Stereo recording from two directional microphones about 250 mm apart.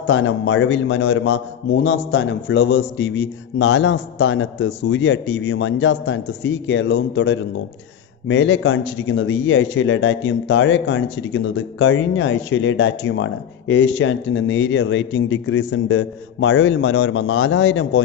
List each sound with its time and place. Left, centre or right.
0.0 s a man's voice: left